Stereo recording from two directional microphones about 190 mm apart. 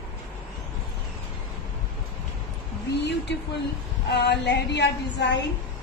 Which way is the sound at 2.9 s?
65° left (ahead or behind).